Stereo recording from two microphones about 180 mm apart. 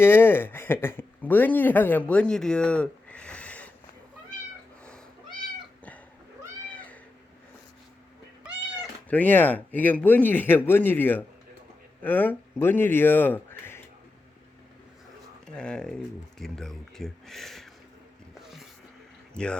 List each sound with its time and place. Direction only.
0.0 s speech: 10° left (ahead or behind)
6.7 s cat: 10° left (ahead or behind)
9.0 s a man's voice: 10° left (ahead or behind)
15.4 s speech: 5° left (ahead or behind)
19.3 s speech: 5° left (ahead or behind)